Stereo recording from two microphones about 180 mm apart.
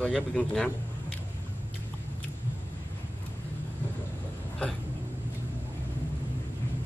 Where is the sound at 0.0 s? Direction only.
5° left (ahead or behind).